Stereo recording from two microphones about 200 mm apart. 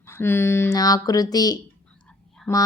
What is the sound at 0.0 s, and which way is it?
A woman's voice, 10° left (ahead or behind).